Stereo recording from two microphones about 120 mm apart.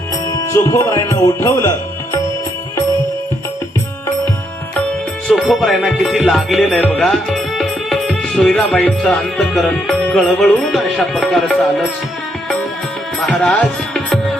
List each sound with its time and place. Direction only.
0.3 s speech: 25° left (ahead or behind)
5.3 s speech: centre (ahead or behind)
6.6 s music: 10° left (ahead or behind)
7.0 s speech: 5° left (ahead or behind)
13.1 s music: 10° left (ahead or behind)